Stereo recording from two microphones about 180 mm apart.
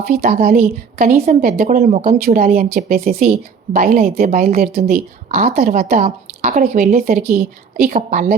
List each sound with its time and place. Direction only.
0.3 s a woman's voice: 55° right (ahead or behind)
1.9 s a woman's voice: 40° right (ahead or behind); by 3.1 s 55° right (ahead or behind)
3.1 s a woman's voice: 45° right (ahead or behind)
5.3 s a woman's voice: 40° right (ahead or behind)
5.5 s speech: 55° right (ahead or behind)
6.1 s a woman's voice: 45° right (ahead or behind)